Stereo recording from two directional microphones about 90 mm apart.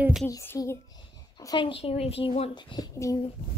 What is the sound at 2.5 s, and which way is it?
Speech, 55° left (ahead or behind).